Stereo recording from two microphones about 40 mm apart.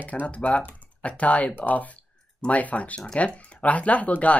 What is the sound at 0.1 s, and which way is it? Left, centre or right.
Speech, left.